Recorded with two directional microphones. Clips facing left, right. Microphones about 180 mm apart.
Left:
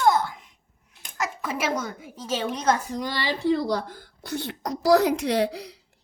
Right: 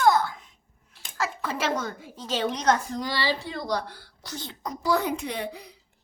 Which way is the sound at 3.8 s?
45° left (ahead or behind).